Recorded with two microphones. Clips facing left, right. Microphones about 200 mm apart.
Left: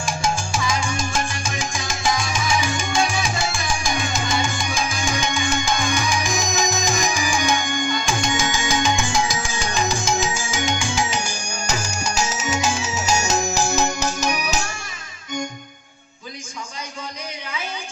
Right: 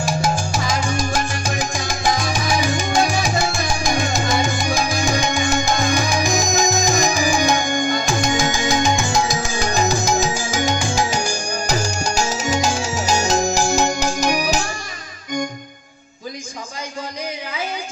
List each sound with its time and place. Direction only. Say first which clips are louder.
0.6 s music: right 2 dB; 40° right (ahead or behind)